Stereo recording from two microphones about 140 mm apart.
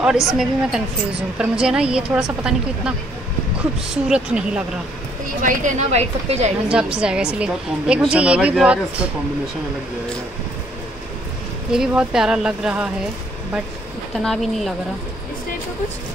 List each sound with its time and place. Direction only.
0.0 s a woman's voice: 5° right (ahead or behind)
3.9 s a woman's voice: 5° right (ahead or behind)
5.4 s a woman's voice: 65° right (ahead or behind); by 6.5 s 50° right (ahead or behind)
6.7 s a woman's voice: 5° right (ahead or behind)
11.7 s a woman's voice: 5° right (ahead or behind)
14.1 s a woman's voice: centre (ahead or behind)